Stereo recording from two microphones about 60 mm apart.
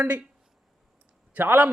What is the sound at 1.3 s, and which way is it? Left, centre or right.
Speech, right.